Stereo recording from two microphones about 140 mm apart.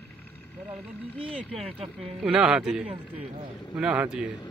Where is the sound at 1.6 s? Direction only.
45° right (ahead or behind).